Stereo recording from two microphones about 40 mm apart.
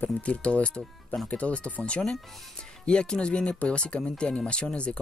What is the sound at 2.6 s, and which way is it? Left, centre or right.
Speech, left.